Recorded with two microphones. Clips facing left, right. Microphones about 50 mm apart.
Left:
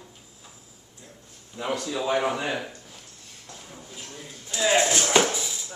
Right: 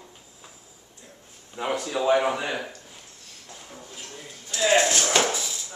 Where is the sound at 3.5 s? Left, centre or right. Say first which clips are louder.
Right 1 dB; centre.